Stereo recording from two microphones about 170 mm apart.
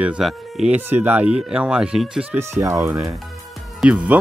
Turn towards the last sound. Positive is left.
turn(degrees=-10)  # may be behind; listen again after turning